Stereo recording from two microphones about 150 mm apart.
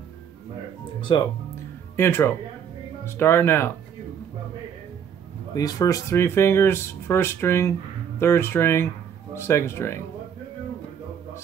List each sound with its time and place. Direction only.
1.1 s speech: 30° left (ahead or behind)
2.0 s speech: 15° left (ahead or behind)
5.5 s speech: 25° left (ahead or behind)